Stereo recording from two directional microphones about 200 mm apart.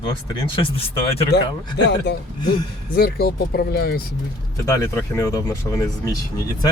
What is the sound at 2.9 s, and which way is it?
Speech, 50° left (ahead or behind).